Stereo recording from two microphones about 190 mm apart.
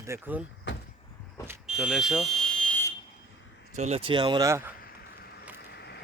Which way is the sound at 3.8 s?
35° right (ahead or behind).